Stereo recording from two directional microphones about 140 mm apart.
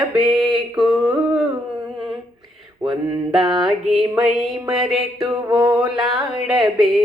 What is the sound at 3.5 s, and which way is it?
Mantra, centre (ahead or behind).